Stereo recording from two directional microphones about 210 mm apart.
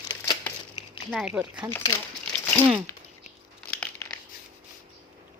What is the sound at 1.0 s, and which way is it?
Speech, centre (ahead or behind).